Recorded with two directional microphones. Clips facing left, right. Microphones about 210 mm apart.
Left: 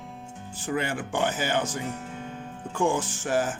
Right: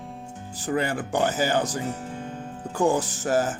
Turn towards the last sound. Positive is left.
turn(degrees=-40)  # may be behind; listen again after turning